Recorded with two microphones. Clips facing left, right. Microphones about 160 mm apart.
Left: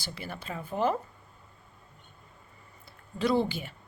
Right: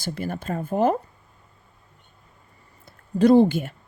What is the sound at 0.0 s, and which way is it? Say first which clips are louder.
Speech: right 10 dB; 45° right (ahead or behind).